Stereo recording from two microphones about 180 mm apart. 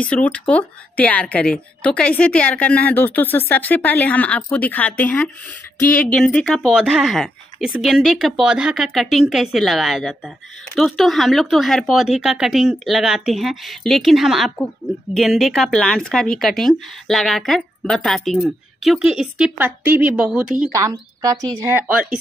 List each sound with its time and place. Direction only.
0.0 s speech: 5° left (ahead or behind)
20.7 s a woman's voice: 20° right (ahead or behind)